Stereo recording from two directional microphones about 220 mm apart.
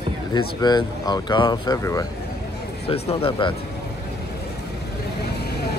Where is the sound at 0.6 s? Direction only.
20° left (ahead or behind).